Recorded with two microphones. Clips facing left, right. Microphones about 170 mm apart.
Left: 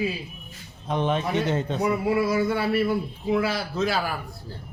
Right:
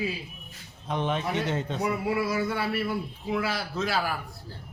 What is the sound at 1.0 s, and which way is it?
Speech, 35° left (ahead or behind).